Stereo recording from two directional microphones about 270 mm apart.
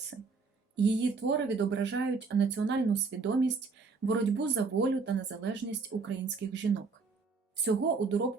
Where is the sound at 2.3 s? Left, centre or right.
Right.